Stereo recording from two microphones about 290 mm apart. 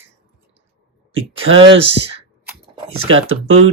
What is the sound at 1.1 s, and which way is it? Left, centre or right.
Speech, right.